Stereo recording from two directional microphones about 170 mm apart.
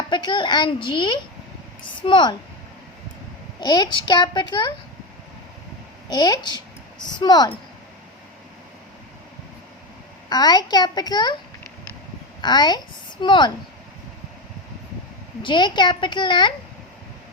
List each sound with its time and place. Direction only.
0.1 s a woman's voice: 25° left (ahead or behind)
3.6 s a woman's voice: 25° left (ahead or behind)
6.1 s a woman's voice: 25° left (ahead or behind)
10.2 s a woman's voice: 25° left (ahead or behind)
12.4 s a woman's voice: 25° left (ahead or behind)
15.4 s a woman's voice: 25° left (ahead or behind)